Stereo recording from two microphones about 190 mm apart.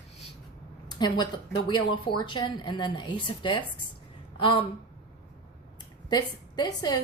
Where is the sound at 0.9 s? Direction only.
25° left (ahead or behind).